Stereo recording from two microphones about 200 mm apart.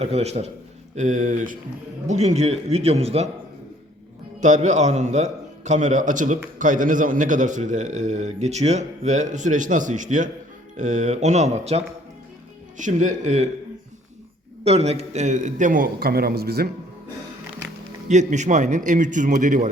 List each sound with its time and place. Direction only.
0.0 s a man's voice: 30° right (ahead or behind)
4.4 s a man's voice: 35° right (ahead or behind)
14.6 s a man's voice: 30° right (ahead or behind); by 16.6 s 50° right (ahead or behind)
18.1 s a man's voice: 35° right (ahead or behind)